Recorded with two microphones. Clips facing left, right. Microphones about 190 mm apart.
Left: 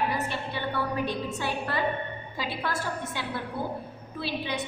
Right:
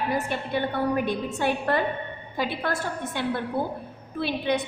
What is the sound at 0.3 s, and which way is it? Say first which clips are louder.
A woman's voice: right 5 dB; 50° right (ahead or behind).